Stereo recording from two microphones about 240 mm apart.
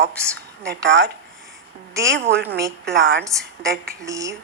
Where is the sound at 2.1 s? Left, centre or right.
Right.